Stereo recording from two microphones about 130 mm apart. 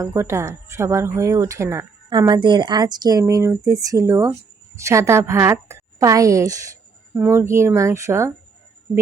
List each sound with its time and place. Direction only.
0.0 s speech: 20° right (ahead or behind)
2.0 s speech: 35° right (ahead or behind)